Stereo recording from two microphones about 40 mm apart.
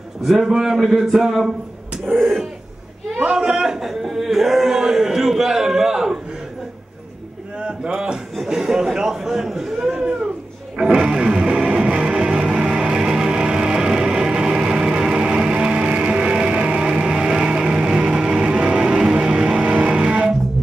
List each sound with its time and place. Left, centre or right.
0.2 s a man's voice: centre
0.5 s speech: centre
2.1 s speech: centre
3.3 s speech: centre
7.6 s a man's voice: centre
10.8 s music: centre